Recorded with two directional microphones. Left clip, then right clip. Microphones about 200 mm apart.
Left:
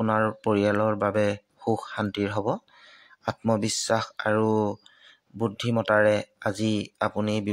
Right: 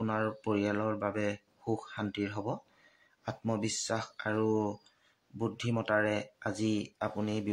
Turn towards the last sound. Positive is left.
turn(degrees=40)  # may be behind; listen again after turning